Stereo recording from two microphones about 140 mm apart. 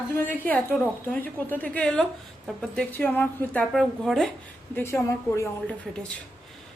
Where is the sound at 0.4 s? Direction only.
10° left (ahead or behind).